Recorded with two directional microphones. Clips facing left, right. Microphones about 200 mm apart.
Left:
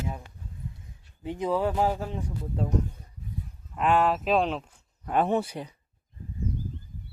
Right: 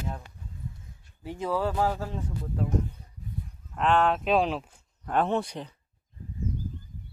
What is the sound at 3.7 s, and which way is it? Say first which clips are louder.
Speech: even; 5° left (ahead or behind).